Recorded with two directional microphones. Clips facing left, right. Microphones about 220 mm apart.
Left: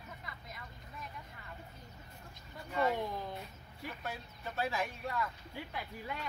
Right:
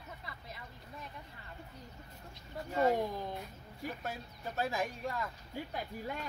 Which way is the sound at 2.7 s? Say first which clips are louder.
Right 3 dB; 45° right (ahead or behind).